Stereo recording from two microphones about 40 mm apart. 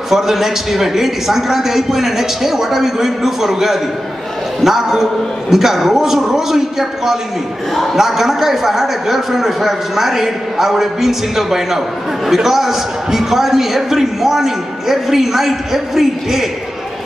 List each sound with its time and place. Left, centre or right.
0.1 s a man's voice: centre